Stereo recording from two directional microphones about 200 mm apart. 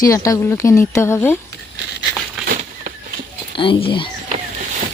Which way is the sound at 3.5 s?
25° left (ahead or behind).